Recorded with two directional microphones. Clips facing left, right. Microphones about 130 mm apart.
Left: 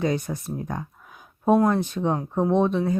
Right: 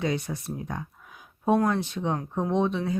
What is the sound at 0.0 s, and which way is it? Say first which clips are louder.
Speech: left 3 dB; 45° left (ahead or behind).